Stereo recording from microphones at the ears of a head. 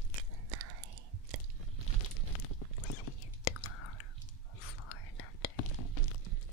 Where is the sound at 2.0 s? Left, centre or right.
Left.